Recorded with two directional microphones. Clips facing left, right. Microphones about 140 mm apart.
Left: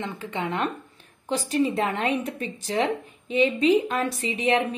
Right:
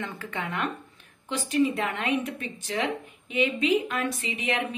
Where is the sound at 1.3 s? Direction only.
35° left (ahead or behind).